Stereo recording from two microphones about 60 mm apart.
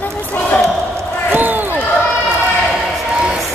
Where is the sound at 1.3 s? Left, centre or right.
Right.